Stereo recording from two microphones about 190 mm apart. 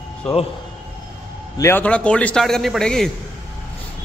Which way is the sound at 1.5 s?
15° left (ahead or behind).